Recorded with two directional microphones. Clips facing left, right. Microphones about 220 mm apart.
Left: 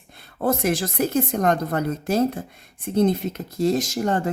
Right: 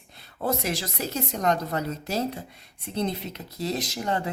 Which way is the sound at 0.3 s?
50° left (ahead or behind).